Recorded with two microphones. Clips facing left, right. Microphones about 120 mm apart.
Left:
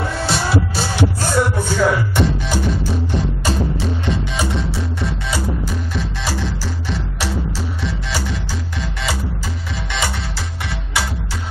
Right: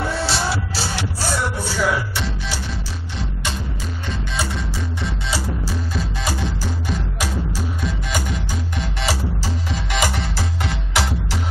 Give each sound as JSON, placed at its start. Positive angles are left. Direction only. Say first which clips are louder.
{"t": 0.3, "sound": "music", "louder": "left 4 dB", "side_deg": 50}
{"t": 4.4, "sound": "music", "louder": "left 4 dB", "side_deg": 0}
{"t": 5.9, "sound": "music", "louder": "left 1 dB", "side_deg": -15}